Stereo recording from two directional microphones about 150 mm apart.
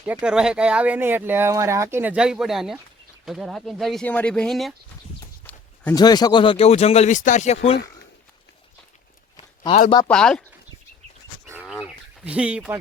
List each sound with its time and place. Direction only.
0.0 s speech: 5° right (ahead or behind)
5.9 s speech: 25° left (ahead or behind); by 7.8 s 45° left (ahead or behind)
10.1 s speech: 5° left (ahead or behind)
11.6 s bird: centre (ahead or behind)